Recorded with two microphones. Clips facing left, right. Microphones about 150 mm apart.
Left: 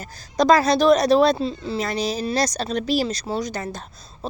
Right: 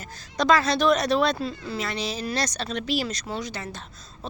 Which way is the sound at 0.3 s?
40° left (ahead or behind).